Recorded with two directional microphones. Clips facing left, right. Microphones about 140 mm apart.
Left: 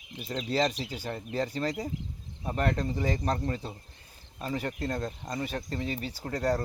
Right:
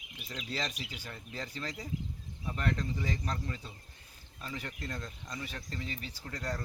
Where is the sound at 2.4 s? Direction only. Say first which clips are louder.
Left 6 dB; 45° left (ahead or behind).